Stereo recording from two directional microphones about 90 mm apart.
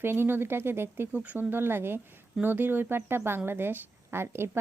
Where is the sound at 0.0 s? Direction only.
25° right (ahead or behind).